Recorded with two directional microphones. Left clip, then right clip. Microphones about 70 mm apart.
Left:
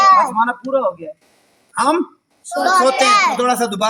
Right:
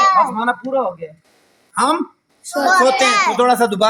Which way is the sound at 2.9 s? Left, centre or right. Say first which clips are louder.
Left 1 dB; left.